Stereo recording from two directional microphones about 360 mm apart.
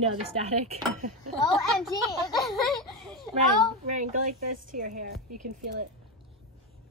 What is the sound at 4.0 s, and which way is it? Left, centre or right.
A woman's voice, centre.